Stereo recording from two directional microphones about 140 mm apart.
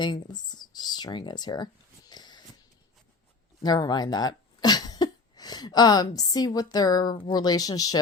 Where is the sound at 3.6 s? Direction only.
30° left (ahead or behind).